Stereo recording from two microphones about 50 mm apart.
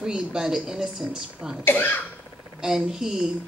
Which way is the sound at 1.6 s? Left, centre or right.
Left.